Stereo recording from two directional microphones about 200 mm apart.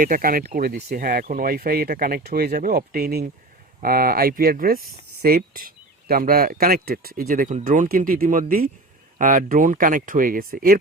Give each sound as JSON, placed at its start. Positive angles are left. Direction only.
{"t": 0.0, "sound": "speech", "side_deg": -45}